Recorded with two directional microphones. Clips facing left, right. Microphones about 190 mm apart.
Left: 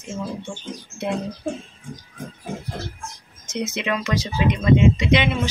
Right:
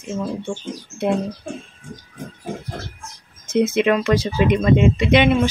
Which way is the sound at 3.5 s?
55° right (ahead or behind).